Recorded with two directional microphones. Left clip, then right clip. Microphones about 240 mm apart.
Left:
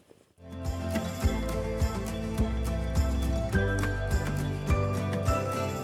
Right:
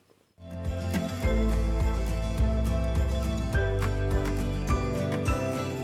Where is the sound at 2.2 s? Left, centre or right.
Centre.